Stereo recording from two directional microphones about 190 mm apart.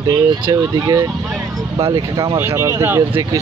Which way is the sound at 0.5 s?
20° right (ahead or behind).